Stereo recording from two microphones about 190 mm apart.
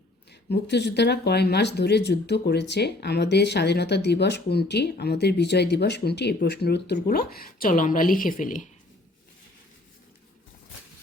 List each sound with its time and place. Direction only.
0.3 s speech: 60° left (ahead or behind); by 8.6 s 45° left (ahead or behind)